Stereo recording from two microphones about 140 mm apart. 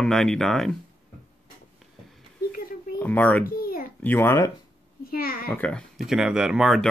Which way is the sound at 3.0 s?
10° left (ahead or behind).